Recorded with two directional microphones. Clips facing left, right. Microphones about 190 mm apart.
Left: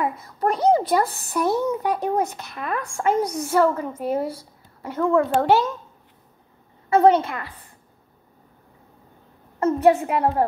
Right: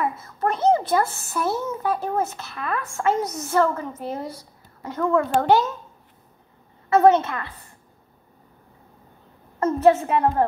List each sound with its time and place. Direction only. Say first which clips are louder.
0.0 s a child's voice: left 1 dB; 15° left (ahead or behind)
1.0 s a woman's voice: left 2 dB; 35° left (ahead or behind)
1.3 s speech: left 6 dB; 15° left (ahead or behind)
6.9 s speech: even; 15° left (ahead or behind)
9.6 s speech: even; 15° left (ahead or behind)